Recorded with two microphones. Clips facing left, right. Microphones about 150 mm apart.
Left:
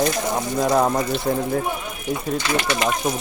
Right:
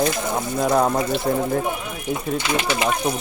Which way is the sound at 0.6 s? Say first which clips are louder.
Even; 5° right (ahead or behind).